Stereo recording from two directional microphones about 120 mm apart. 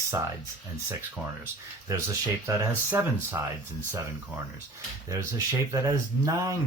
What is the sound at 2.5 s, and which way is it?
Speech, 20° right (ahead or behind).